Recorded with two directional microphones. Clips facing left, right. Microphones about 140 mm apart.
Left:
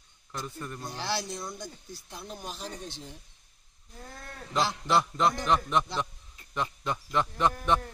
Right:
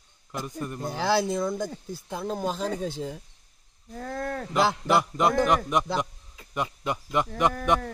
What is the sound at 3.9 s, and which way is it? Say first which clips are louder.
Speech: right 14 dB; 90° right.